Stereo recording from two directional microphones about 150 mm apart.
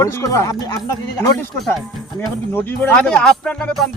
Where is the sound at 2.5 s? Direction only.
15° left (ahead or behind).